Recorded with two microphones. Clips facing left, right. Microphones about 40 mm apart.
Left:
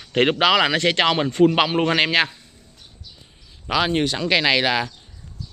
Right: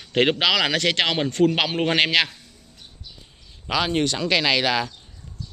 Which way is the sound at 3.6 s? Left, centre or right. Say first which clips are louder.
Left 2 dB; centre.